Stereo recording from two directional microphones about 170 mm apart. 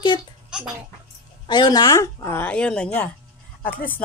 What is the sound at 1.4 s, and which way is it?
Speech, 25° left (ahead or behind).